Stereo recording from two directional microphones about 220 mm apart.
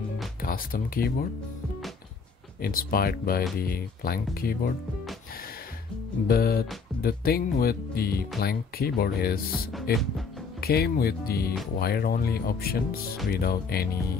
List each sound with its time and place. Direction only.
0.4 s speech: 40° left (ahead or behind)
2.6 s speech: 40° left (ahead or behind)
6.2 s speech: 45° left (ahead or behind)
9.5 s speech: centre (ahead or behind)
10.6 s speech: 45° left (ahead or behind)